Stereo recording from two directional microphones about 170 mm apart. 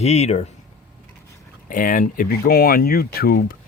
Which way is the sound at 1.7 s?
50° left (ahead or behind).